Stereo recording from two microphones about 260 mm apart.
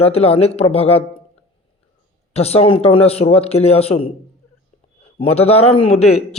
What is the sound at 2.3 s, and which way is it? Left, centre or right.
A man's voice, left.